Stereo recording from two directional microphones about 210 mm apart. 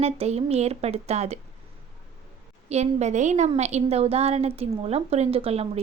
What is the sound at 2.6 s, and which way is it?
A woman's voice, 30° right (ahead or behind).